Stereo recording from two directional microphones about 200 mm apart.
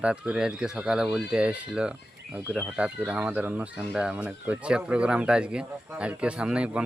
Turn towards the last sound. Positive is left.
turn(degrees=-5)  # may be behind; listen again after turning